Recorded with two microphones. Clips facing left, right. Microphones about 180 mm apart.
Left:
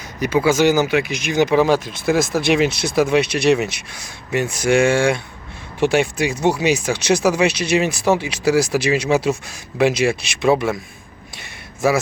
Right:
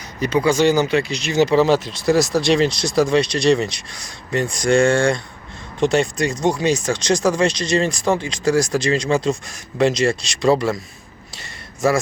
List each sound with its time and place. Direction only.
0.2 s speech: 5° left (ahead or behind)
1.8 s speech: 55° left (ahead or behind)
2.0 s speech: centre (ahead or behind)